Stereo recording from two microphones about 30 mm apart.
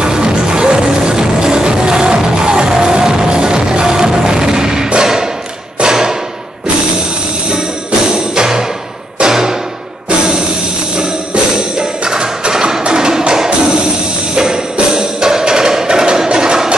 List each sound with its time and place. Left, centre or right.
0.0 s music: right
5.0 s thump: centre
8.1 s music: right
11.0 s music: right